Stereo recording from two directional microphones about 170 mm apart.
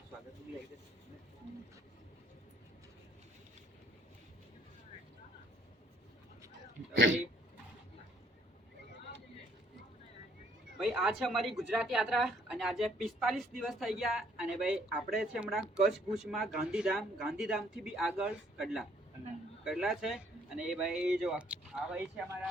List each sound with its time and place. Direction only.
6.9 s speech: 90° right
10.8 s speech: 5° right (ahead or behind)